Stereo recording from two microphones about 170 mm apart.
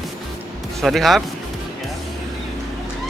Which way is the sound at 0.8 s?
Centre (ahead or behind).